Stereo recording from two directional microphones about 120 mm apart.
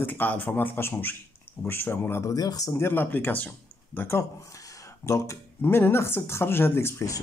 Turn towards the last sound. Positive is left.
turn(degrees=25)  # may be behind; listen again after turning